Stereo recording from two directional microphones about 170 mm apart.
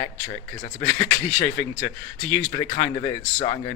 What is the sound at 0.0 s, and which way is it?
Speech, 20° left (ahead or behind).